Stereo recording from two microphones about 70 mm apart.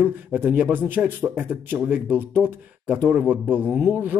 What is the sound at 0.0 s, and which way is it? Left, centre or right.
Speech, right.